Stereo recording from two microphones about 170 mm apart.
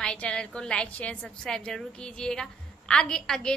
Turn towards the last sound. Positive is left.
turn(degrees=5)  # may be behind; listen again after turning